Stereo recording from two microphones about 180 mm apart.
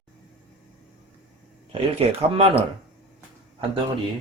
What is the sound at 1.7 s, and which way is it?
Speech, 30° right (ahead or behind).